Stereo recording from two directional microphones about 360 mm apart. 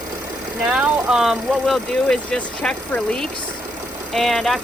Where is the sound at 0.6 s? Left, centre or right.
Centre.